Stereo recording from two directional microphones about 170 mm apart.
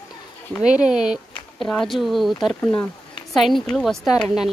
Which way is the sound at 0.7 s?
5° right (ahead or behind).